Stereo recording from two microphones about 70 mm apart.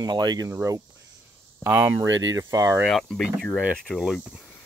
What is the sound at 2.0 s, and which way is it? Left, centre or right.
Speech, right.